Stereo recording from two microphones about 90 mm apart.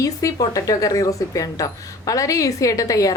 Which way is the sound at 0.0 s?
40° left (ahead or behind).